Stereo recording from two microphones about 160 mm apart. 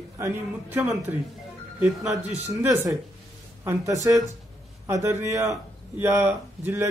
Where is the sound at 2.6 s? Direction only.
15° right (ahead or behind).